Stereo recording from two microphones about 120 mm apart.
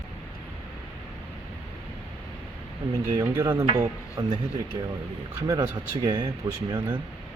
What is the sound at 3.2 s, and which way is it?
Speech, 25° right (ahead or behind).